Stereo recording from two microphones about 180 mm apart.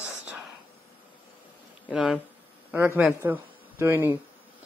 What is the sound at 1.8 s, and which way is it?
A man's voice, 5° right (ahead or behind).